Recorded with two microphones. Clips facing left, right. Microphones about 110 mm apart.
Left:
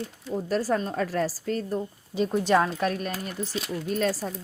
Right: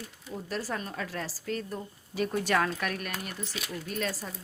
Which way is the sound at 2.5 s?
25° left (ahead or behind).